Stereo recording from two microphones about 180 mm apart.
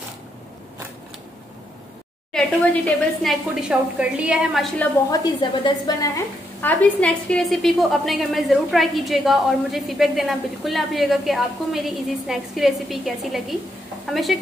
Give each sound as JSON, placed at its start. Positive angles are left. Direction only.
{"t": 2.3, "sound": "a woman's voice", "side_deg": 5}
{"t": 3.6, "sound": "a woman's voice", "side_deg": -5}
{"t": 5.1, "sound": "a woman's voice", "side_deg": 25}